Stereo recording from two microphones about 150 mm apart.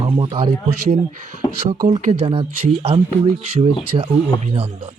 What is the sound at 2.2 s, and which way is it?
Speech, 40° right (ahead or behind).